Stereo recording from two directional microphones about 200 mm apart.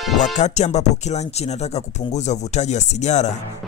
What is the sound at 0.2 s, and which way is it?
Speech, 35° left (ahead or behind).